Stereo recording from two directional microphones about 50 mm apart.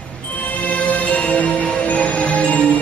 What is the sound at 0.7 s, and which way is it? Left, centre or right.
Music, left.